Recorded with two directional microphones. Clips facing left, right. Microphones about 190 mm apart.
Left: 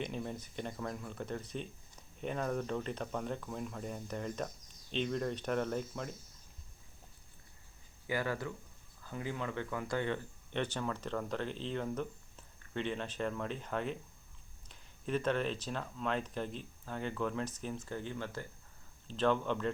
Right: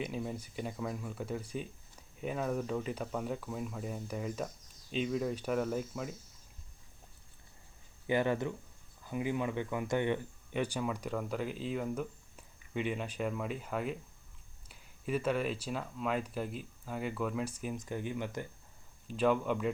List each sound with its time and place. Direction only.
0.0 s speech: 5° right (ahead or behind)
8.0 s speech: 20° right (ahead or behind)
10.5 s speech: 10° right (ahead or behind)